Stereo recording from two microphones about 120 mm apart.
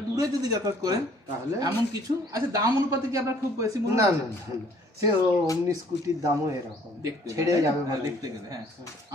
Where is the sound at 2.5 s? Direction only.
25° right (ahead or behind).